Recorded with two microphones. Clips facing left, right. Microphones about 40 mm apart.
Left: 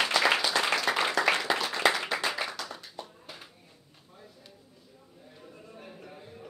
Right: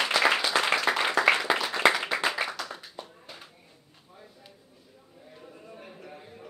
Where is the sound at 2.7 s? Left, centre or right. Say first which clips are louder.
Right 1 dB; centre.